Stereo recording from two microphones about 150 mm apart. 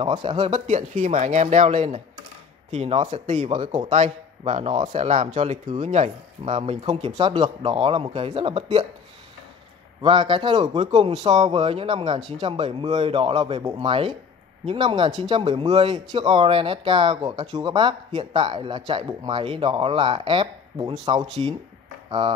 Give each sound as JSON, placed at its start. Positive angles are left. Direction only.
{"t": 0.0, "sound": "speech", "side_deg": -35}
{"t": 3.9, "sound": "speech", "side_deg": -45}
{"t": 10.0, "sound": "speech", "side_deg": -35}